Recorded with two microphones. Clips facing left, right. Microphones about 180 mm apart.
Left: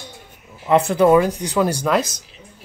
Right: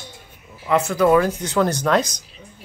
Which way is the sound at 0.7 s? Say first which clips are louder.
Left 3 dB; 30° left (ahead or behind).